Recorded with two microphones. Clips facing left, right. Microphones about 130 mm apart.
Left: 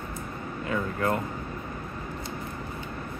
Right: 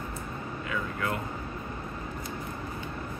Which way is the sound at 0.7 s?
35° left (ahead or behind).